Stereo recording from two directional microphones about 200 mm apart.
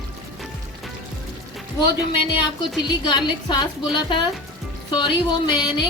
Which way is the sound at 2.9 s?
20° left (ahead or behind).